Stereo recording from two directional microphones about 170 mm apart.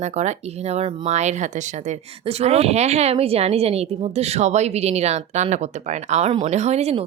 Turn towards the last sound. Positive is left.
turn(degrees=-40)  # may be behind; listen again after turning